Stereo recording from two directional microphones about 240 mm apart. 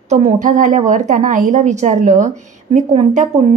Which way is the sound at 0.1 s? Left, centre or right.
Right.